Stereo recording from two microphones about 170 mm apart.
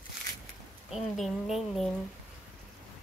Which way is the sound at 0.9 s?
Centre (ahead or behind).